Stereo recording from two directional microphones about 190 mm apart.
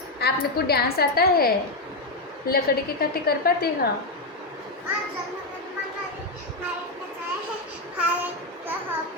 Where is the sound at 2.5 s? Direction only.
55° left (ahead or behind).